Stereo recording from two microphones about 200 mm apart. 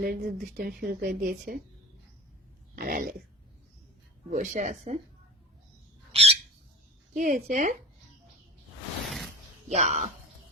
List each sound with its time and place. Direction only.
0.0 s a woman's voice: 50° right (ahead or behind)
2.7 s a woman's voice: 45° right (ahead or behind)
4.3 s speech: 40° right (ahead or behind)
6.1 s bird: 30° right (ahead or behind)
7.2 s speech: 40° right (ahead or behind)
9.0 s a sound: centre (ahead or behind)
9.6 s speech: 35° right (ahead or behind)